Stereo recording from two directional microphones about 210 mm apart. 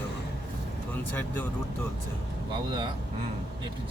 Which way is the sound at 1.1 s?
10° left (ahead or behind).